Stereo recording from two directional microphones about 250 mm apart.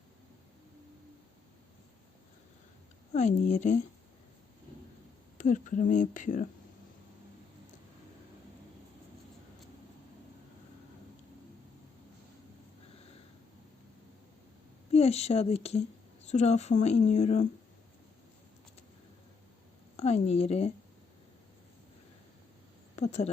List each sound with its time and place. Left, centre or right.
3.1 s speech: left
5.4 s speech: left
14.9 s speech: left
20.0 s speech: left
23.0 s speech: left